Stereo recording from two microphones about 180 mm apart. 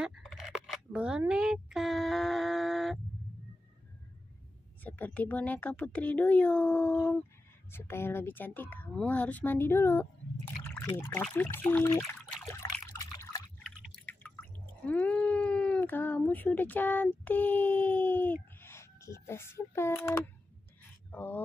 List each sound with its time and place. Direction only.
0.0 s a sound: centre (ahead or behind)
4.8 s speech: 10° left (ahead or behind)
12.4 s trickle: 15° left (ahead or behind)
14.0 s cat: 10° left (ahead or behind)
21.1 s speech: 10° left (ahead or behind)